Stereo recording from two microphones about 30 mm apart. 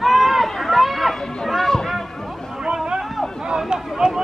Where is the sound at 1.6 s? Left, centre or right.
Centre.